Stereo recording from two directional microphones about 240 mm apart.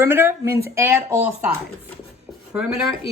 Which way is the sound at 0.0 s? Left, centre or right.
Centre.